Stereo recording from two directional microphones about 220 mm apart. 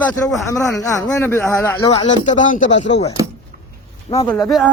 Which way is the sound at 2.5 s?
35° left (ahead or behind).